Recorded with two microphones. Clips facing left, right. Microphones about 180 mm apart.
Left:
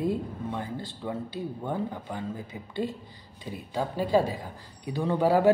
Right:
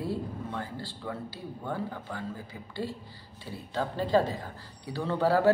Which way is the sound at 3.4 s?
15° left (ahead or behind).